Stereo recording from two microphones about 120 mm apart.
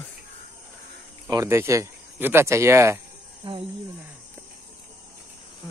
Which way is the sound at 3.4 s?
45° right (ahead or behind).